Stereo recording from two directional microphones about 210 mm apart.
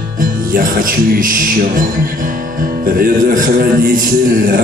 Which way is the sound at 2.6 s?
45° right (ahead or behind).